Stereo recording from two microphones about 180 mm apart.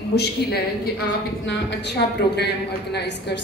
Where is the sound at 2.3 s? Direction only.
65° left (ahead or behind).